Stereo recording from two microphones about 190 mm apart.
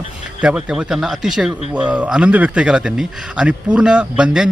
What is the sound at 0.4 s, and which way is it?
Speech, 5° right (ahead or behind).